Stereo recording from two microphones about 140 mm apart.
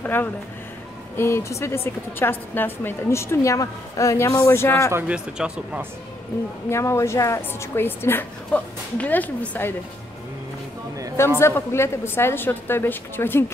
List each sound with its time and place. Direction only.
0.0 s a woman's voice: 15° left (ahead or behind)
4.9 s speech: 10° right (ahead or behind)
6.7 s a woman's voice: 20° left (ahead or behind)
11.3 s a woman's voice: 20° left (ahead or behind)